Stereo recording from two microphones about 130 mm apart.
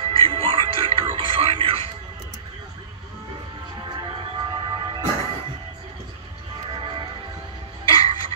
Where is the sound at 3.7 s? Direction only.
30° right (ahead or behind).